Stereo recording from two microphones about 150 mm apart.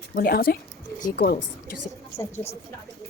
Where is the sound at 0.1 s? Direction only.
90° left.